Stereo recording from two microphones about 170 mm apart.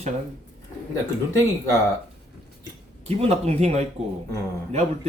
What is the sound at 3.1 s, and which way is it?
Speech, 40° right (ahead or behind).